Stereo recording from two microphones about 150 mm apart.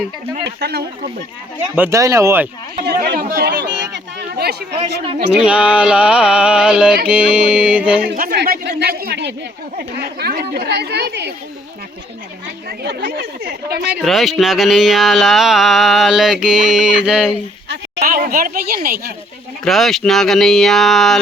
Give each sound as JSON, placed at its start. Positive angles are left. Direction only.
{"t": 0.4, "sound": "speech", "side_deg": -90}
{"t": 1.7, "sound": "speech", "side_deg": -15}
{"t": 2.8, "sound": "speech", "side_deg": -90}
{"t": 5.4, "sound": "a sound", "side_deg": -5}
{"t": 8.0, "sound": "speech", "side_deg": -80}
{"t": 12.6, "sound": "speech", "side_deg": -90}
{"t": 14.0, "sound": "a sound", "side_deg": 0}
{"t": 18.0, "sound": "speech", "side_deg": -70}
{"t": 19.6, "sound": "a sound", "side_deg": 0}